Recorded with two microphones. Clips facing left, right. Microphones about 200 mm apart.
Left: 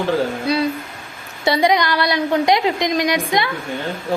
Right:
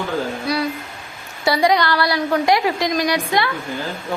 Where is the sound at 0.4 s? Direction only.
25° left (ahead or behind).